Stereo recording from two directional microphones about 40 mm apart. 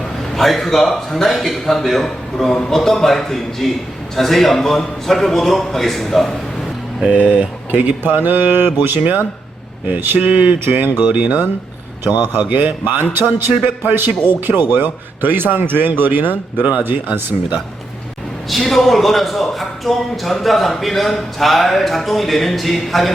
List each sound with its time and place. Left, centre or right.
0.3 s a man's voice: centre
7.1 s speech: right
7.7 s a man's voice: right
11.0 s speech: right
12.0 s a man's voice: right
12.4 s a man's voice: right
16.8 s a man's voice: right
18.7 s a man's voice: centre